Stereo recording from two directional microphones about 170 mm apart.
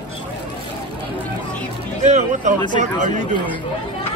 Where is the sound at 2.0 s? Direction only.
45° right (ahead or behind).